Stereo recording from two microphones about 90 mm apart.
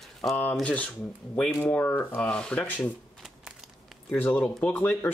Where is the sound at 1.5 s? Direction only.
25° left (ahead or behind).